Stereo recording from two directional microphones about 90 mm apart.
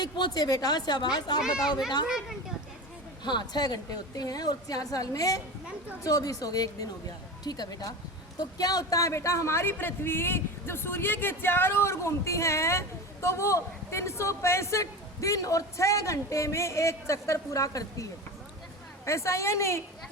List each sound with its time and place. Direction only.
0.0 s a woman's voice: 50° left (ahead or behind)
2.0 s speech: 5° right (ahead or behind)
3.2 s a woman's voice: 55° left (ahead or behind); by 19.8 s 30° left (ahead or behind)